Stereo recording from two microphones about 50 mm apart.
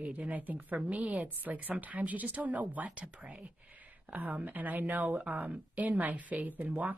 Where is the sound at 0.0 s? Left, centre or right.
Right.